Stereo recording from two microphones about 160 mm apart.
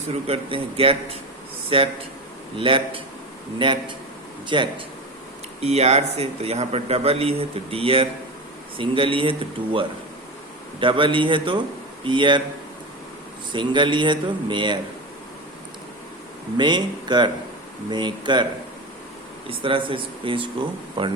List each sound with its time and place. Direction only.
0.1 s a man's voice: 35° right (ahead or behind)
5.6 s a man's voice: 40° right (ahead or behind)
10.8 s a man's voice: 30° right (ahead or behind)
13.5 s speech: 30° right (ahead or behind)
16.6 s speech: 25° right (ahead or behind)
19.5 s a man's voice: 35° right (ahead or behind)